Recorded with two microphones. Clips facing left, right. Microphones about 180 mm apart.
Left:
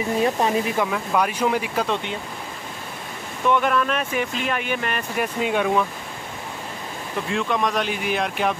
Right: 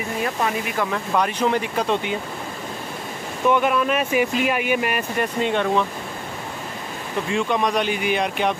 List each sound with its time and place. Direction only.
0.2 s speech: 30° left (ahead or behind)
0.9 s speech: 5° left (ahead or behind)
3.4 s speech: 5° right (ahead or behind)
5.2 s speech: 5° left (ahead or behind)
7.2 s speech: centre (ahead or behind)